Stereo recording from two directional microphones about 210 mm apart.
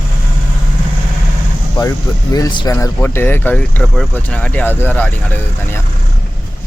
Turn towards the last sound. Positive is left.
turn(degrees=10)  # may be behind; listen again after turning